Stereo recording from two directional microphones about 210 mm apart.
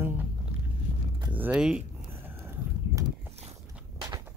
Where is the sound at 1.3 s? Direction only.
5° right (ahead or behind).